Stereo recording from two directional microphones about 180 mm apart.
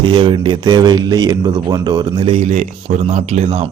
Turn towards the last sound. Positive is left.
turn(degrees=-35)  # may be behind; listen again after turning